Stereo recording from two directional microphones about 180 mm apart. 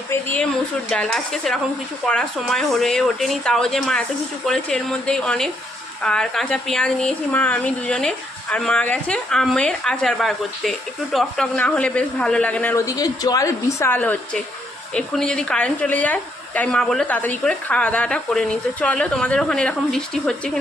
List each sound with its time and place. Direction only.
0.1 s speech: 10° left (ahead or behind)